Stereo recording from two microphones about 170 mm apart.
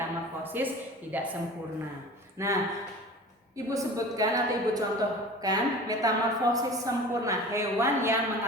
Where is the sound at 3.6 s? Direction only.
20° right (ahead or behind).